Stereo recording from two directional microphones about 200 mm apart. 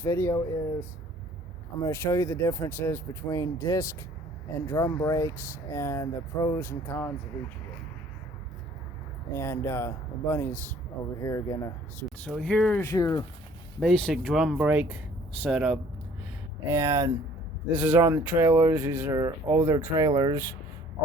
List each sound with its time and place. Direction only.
0.0 s speech: 10° left (ahead or behind)
1.8 s speech: 15° left (ahead or behind)
9.3 s speech: 15° left (ahead or behind)
12.2 s speech: 5° left (ahead or behind)
13.7 s speech: centre (ahead or behind)
16.6 s speech: 15° right (ahead or behind)